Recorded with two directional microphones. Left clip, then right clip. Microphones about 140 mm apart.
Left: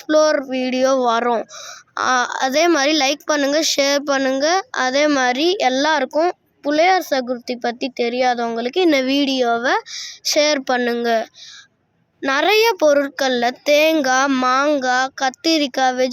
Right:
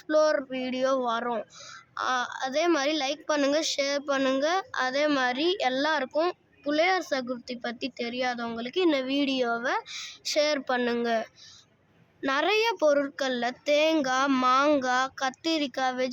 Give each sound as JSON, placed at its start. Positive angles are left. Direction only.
{"t": 0.1, "sound": "a woman's voice", "side_deg": 45}
{"t": 4.2, "sound": "a woman's voice", "side_deg": 35}
{"t": 9.6, "sound": "a woman's voice", "side_deg": 55}
{"t": 9.9, "sound": "speech", "side_deg": 25}
{"t": 10.3, "sound": "speech", "side_deg": 40}
{"t": 10.8, "sound": "speech", "side_deg": 30}